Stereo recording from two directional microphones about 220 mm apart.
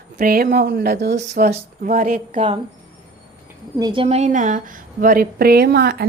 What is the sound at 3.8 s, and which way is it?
A woman's voice, 20° right (ahead or behind).